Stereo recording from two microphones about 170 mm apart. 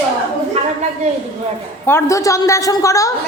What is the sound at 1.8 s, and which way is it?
A woman's voice, 15° left (ahead or behind).